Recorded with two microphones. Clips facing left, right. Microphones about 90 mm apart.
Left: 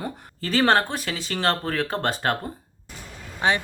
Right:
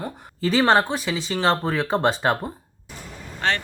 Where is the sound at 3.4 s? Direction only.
15° left (ahead or behind).